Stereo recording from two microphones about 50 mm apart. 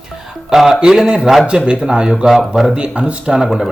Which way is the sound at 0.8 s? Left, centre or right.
Centre.